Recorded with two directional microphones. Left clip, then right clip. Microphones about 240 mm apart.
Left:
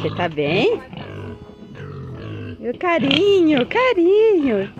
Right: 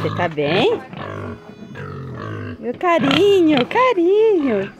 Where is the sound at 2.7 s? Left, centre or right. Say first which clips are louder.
Right 2 dB; centre.